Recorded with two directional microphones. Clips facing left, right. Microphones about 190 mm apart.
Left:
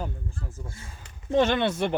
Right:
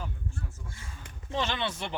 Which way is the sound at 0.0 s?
35° left (ahead or behind).